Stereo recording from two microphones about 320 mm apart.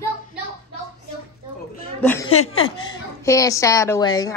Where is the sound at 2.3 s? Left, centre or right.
Left.